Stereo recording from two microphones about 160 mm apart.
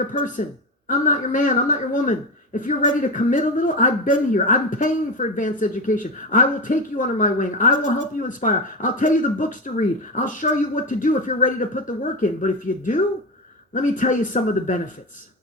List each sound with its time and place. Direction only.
0.1 s speech: 55° left (ahead or behind)